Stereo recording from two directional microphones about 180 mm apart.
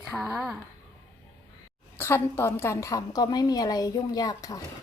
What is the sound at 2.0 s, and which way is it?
A woman's voice, 15° left (ahead or behind).